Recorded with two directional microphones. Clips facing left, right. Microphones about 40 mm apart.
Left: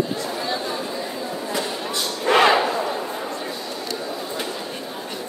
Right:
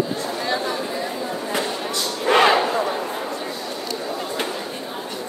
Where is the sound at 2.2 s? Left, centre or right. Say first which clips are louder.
Even; centre.